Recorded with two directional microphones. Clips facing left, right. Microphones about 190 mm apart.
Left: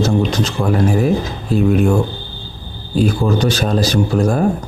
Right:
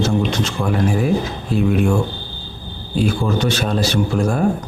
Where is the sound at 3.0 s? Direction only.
35° left (ahead or behind).